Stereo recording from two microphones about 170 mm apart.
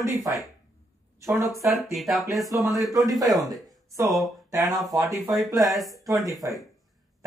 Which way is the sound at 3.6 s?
20° right (ahead or behind).